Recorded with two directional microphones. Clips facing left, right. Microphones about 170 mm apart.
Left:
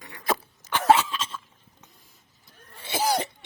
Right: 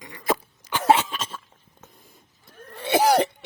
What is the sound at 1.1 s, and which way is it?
Cough, 50° right (ahead or behind).